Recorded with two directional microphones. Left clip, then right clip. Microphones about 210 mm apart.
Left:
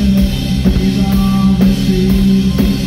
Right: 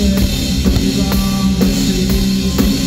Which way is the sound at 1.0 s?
20° right (ahead or behind).